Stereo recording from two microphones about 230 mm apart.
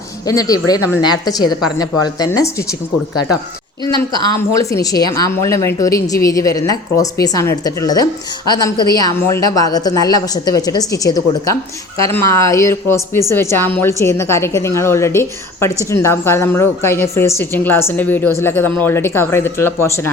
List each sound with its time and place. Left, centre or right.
0.3 s speech: centre
4.4 s speech: centre